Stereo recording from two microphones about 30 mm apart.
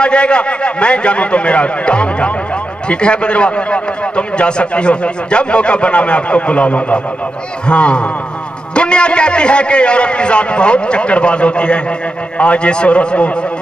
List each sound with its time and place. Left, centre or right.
0.0 s a man's voice: left